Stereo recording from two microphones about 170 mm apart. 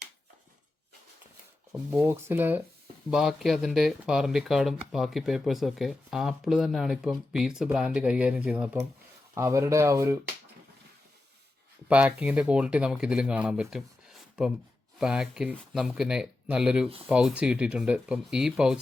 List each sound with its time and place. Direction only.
2.0 s speech: 15° right (ahead or behind)
11.9 s speech: 5° right (ahead or behind)